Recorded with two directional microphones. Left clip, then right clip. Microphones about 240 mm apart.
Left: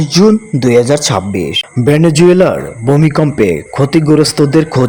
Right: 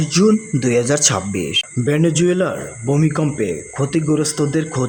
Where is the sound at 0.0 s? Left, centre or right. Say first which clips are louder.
Left 6 dB; centre.